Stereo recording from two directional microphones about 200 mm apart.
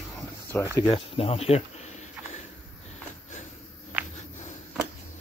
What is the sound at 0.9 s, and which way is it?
Speech, 30° left (ahead or behind).